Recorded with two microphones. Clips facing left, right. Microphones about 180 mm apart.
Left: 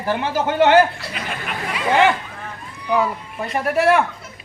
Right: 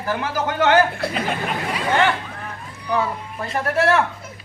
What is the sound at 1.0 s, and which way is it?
Speech, 55° right (ahead or behind).